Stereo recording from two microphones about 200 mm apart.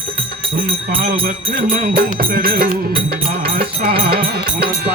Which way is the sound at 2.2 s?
45° right (ahead or behind).